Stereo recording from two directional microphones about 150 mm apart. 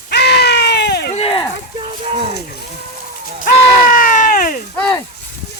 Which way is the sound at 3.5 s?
65° left (ahead or behind).